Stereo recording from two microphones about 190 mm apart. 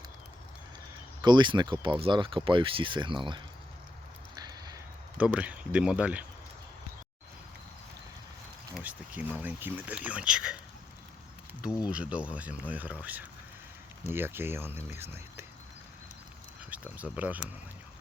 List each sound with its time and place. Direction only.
1.2 s speech: 25° right (ahead or behind)
4.4 s a sound: 20° right (ahead or behind)
5.1 s speech: 5° right (ahead or behind)
8.7 s speech: 10° right (ahead or behind)
11.6 s speech: 5° right (ahead or behind)
16.6 s speech: 10° right (ahead or behind)